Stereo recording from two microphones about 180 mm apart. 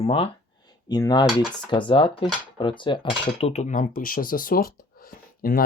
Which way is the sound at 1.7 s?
30° left (ahead or behind).